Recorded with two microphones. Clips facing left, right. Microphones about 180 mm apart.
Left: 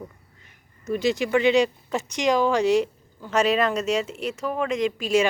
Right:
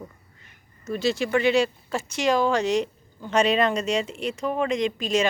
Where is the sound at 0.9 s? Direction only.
15° left (ahead or behind).